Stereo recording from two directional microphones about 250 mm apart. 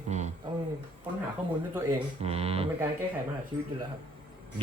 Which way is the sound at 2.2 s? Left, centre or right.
Right.